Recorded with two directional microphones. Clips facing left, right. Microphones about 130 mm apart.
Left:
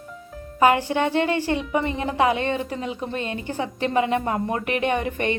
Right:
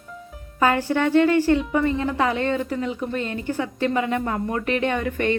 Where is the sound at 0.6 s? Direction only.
20° left (ahead or behind).